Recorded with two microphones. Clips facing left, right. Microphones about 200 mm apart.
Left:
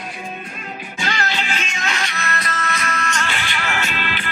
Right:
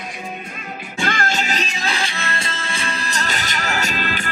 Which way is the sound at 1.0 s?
50° right (ahead or behind).